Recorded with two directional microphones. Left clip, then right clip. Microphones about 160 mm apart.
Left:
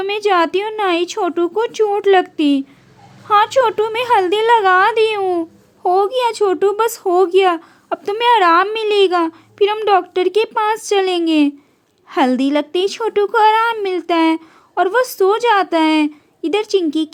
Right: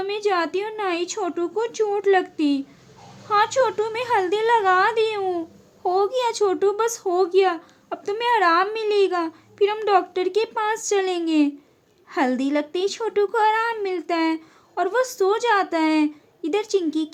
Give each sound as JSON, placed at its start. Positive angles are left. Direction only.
{"t": 0.0, "sound": "a woman's voice", "side_deg": 40}